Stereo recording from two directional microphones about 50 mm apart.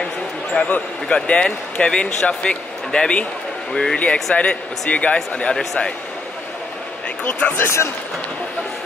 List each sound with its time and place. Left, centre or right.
0.7 s speech: left
4.4 s speech: left
7.2 s speech: left
7.5 s a man's voice: left